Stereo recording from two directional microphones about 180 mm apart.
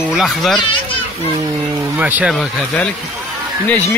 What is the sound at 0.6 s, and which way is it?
Speech, 25° left (ahead or behind).